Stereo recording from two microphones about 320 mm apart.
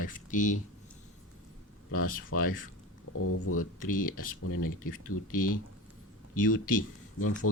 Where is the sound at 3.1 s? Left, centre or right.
Left.